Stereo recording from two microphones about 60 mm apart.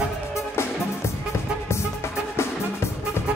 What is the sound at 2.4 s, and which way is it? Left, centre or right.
Music, left.